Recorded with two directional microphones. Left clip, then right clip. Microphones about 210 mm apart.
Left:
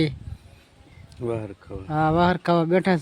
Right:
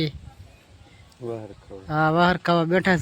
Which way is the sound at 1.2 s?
55° left (ahead or behind).